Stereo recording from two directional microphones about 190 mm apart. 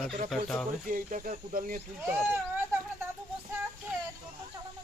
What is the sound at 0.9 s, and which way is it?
Speech, 45° right (ahead or behind).